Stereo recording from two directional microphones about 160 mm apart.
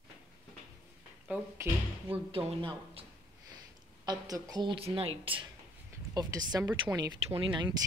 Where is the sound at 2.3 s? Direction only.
35° right (ahead or behind).